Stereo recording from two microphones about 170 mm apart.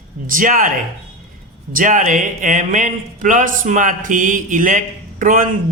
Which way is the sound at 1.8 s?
50° right (ahead or behind).